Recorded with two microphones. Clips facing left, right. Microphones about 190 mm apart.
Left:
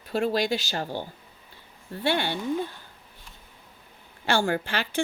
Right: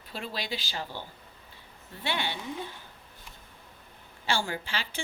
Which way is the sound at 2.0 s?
45° left (ahead or behind).